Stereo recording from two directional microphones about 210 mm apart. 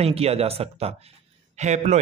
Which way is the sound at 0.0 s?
30° right (ahead or behind).